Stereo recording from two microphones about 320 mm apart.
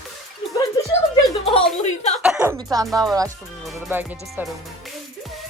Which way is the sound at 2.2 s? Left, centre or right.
Centre.